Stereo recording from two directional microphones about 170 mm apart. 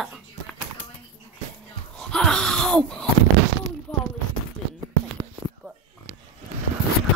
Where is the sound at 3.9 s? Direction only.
5° left (ahead or behind).